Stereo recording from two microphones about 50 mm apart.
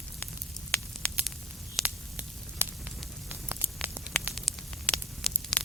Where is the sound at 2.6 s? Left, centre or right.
Right.